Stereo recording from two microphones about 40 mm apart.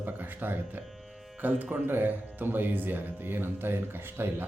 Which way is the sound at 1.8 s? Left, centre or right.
Right.